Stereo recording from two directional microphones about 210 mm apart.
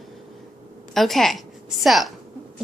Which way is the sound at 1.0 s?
Centre (ahead or behind).